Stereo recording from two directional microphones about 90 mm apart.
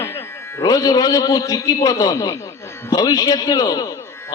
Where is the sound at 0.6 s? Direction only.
45° left (ahead or behind).